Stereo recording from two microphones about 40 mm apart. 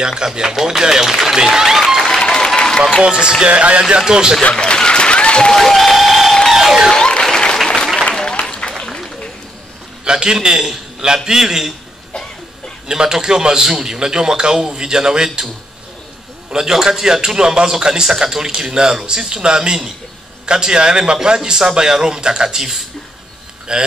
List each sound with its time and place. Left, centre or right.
0.1 s a man's voice: centre
2.0 s applause: centre
3.0 s speech: centre
3.4 s speech: right
4.1 s a man's voice: centre
4.5 s applause: left
5.5 s applause: centre
6.5 s music: centre
6.9 s applause: centre
10.0 s a man's voice: centre
12.8 s a man's voice: centre
16.4 s a man's voice: centre